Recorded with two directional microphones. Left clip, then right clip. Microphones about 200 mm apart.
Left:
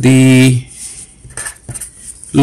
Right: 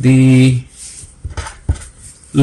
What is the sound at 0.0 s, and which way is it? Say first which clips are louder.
Speech: left 3 dB; 40° left (ahead or behind).